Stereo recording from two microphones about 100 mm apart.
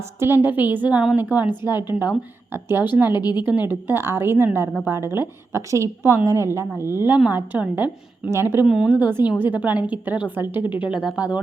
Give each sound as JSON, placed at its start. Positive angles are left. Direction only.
{"t": 0.2, "sound": "a woman's voice", "side_deg": -20}
{"t": 3.1, "sound": "speech", "side_deg": 45}
{"t": 3.4, "sound": "a woman's voice", "side_deg": -20}
{"t": 8.6, "sound": "a woman's voice", "side_deg": -5}
{"t": 8.9, "sound": "a woman's voice", "side_deg": -20}